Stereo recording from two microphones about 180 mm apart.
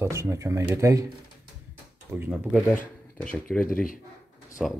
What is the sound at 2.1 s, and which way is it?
Speech, 10° right (ahead or behind).